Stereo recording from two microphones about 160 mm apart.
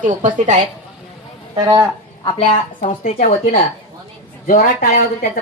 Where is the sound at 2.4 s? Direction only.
50° left (ahead or behind).